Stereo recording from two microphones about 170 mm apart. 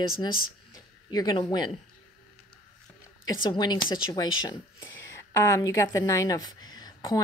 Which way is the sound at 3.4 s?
25° left (ahead or behind).